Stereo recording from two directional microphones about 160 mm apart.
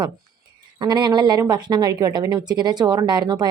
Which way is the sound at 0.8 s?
25° right (ahead or behind).